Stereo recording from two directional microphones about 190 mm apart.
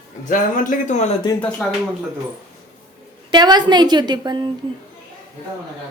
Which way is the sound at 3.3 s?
20° right (ahead or behind).